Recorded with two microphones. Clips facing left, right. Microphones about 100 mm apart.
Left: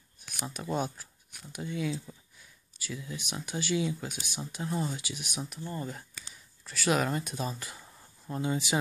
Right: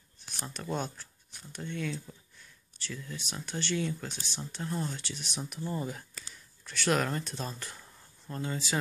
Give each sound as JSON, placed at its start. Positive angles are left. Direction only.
{"t": 0.5, "sound": "speech", "side_deg": 10}
{"t": 5.5, "sound": "speech", "side_deg": -5}
{"t": 6.2, "sound": "a sound", "side_deg": 0}
{"t": 8.4, "sound": "speech", "side_deg": 15}